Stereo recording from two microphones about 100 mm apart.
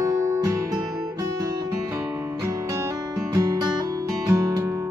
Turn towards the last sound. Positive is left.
turn(degrees=-30)  # may be behind; listen again after turning